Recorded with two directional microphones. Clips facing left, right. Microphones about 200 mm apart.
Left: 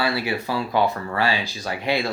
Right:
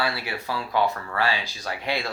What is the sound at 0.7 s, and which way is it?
Speech, 20° left (ahead or behind).